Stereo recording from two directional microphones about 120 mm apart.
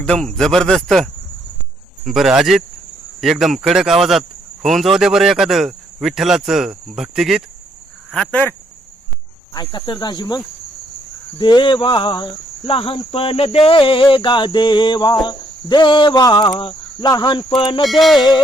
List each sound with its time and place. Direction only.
0.0 s speech: 5° left (ahead or behind)
8.1 s speech: 10° left (ahead or behind)
9.6 s cricket: 40° left (ahead or behind)
11.3 s speech: 40° left (ahead or behind)
17.1 s cricket: 40° left (ahead or behind)